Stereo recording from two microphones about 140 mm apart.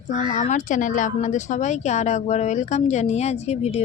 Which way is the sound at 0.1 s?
65° left (ahead or behind).